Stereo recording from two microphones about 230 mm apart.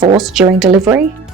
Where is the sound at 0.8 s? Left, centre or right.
Centre.